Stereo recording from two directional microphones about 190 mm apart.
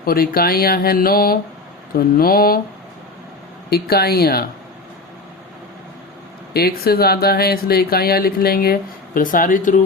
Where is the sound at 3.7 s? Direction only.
55° left (ahead or behind).